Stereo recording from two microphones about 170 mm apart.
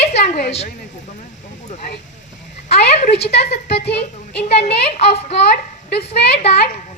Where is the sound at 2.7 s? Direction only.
40° left (ahead or behind).